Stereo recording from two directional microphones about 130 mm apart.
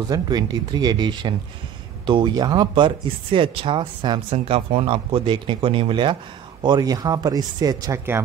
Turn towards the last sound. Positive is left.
turn(degrees=-30)  # may be behind; listen again after turning